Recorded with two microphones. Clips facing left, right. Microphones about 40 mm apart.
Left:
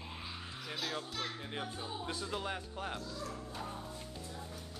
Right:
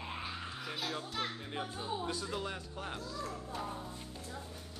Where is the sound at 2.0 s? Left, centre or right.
Centre.